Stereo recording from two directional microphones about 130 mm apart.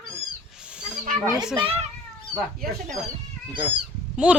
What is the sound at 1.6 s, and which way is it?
Speech, 50° right (ahead or behind).